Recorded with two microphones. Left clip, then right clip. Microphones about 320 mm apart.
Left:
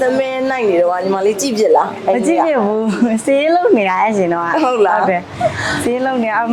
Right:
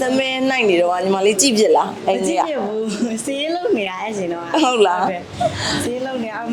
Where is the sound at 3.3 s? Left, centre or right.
Left.